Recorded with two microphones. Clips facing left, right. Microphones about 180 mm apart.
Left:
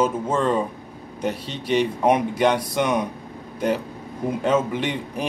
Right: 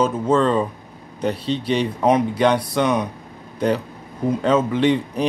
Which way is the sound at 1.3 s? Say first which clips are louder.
Right 8 dB; 45° left (ahead or behind).